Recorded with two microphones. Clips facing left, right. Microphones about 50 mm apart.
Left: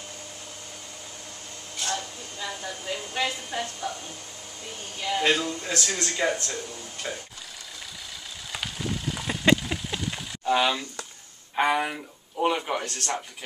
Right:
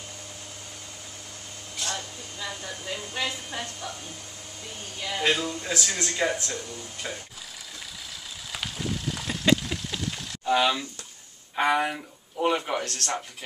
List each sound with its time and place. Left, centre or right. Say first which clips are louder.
1.8 s speech: left 2 dB; centre
5.0 s speech: left 2 dB; centre
8.5 s a sound: even; centre
11.5 s speech: even; centre
12.8 s speech: even; centre